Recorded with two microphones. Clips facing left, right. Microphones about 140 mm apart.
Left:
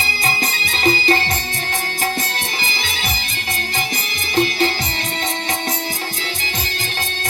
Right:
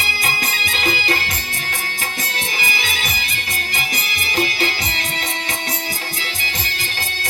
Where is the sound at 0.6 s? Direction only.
30° left (ahead or behind).